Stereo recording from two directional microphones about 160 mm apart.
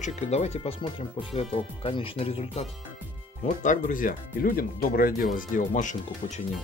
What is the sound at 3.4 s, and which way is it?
Speech, 55° left (ahead or behind).